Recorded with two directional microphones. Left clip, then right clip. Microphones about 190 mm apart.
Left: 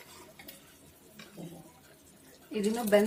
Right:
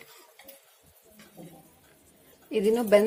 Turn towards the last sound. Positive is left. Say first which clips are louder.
# right 5 dB
turn(degrees=-35)  # may be behind; listen again after turning